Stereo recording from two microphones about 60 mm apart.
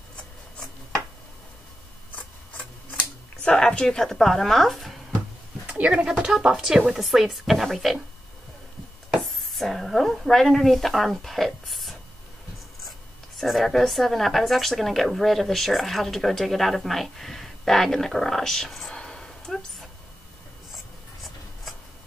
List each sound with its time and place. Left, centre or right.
2.1 s camera: left; by 4.9 s centre
5.7 s a sound: right
6.0 s speech: centre
9.5 s speech: centre
13.4 s speech: centre
18.9 s a sound: centre
20.7 s writing: centre